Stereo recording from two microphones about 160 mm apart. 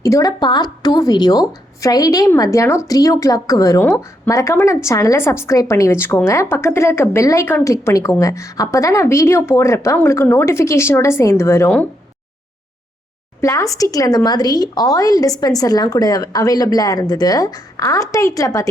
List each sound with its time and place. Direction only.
0.0 s a woman's voice: 20° left (ahead or behind)
13.4 s a woman's voice: 20° left (ahead or behind)